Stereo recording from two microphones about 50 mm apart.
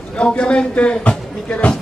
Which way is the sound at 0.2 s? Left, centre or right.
Left.